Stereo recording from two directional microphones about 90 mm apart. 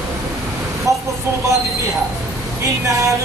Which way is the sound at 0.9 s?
35° right (ahead or behind).